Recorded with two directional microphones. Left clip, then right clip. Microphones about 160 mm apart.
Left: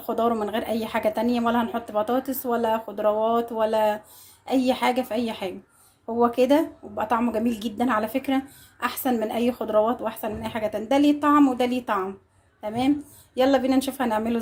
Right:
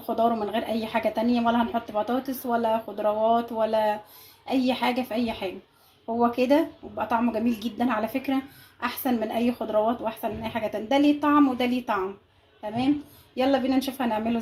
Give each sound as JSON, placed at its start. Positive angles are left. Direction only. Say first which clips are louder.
{"t": 0.0, "sound": "speech", "louder": "even", "side_deg": 10}